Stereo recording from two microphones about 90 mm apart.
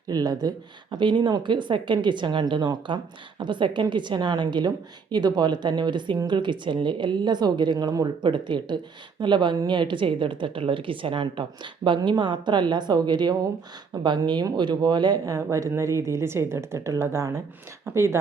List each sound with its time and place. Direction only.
0.1 s a woman's voice: 45° right (ahead or behind); by 11.4 s 70° right (ahead or behind)
11.9 s speech: 55° right (ahead or behind)
15.3 s a woman's voice: 35° right (ahead or behind)